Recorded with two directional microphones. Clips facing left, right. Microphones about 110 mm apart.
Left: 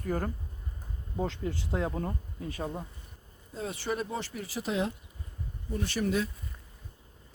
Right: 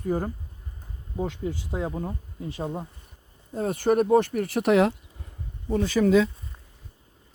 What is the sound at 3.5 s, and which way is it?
Speech, 50° right (ahead or behind).